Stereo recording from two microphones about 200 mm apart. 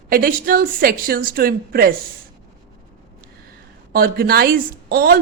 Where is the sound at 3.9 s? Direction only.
45° right (ahead or behind).